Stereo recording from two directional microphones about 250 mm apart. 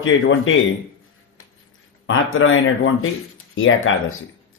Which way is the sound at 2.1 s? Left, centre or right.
Left.